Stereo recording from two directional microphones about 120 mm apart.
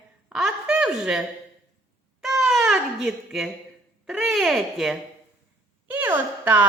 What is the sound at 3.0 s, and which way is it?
Speech, centre (ahead or behind).